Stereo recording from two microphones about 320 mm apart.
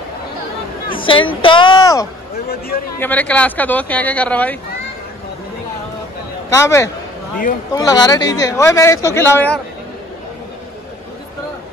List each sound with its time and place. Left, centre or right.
0.9 s speech: centre
6.5 s speech: centre